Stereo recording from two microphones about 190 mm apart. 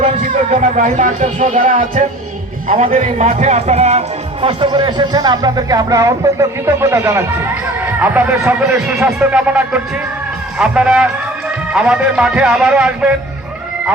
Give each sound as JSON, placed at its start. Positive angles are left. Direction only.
{"t": 0.5, "sound": "speech", "side_deg": -40}
{"t": 2.7, "sound": "a man's voice", "side_deg": -35}